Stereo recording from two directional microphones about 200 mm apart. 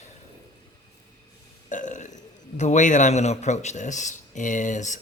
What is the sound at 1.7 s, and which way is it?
A man's voice, 40° left (ahead or behind).